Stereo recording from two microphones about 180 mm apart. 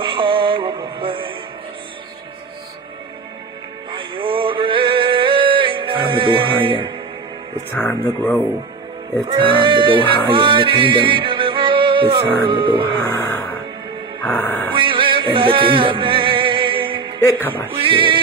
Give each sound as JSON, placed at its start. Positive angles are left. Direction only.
{"t": 0.0, "sound": "music", "side_deg": -30}
{"t": 3.9, "sound": "male singing", "side_deg": -30}
{"t": 7.7, "sound": "speech", "side_deg": 10}
{"t": 9.3, "sound": "music", "side_deg": -30}
{"t": 12.4, "sound": "speech", "side_deg": -30}
{"t": 14.2, "sound": "music", "side_deg": 10}
{"t": 14.7, "sound": "music", "side_deg": -30}
{"t": 17.2, "sound": "speech", "side_deg": 10}
{"t": 17.8, "sound": "speech", "side_deg": -30}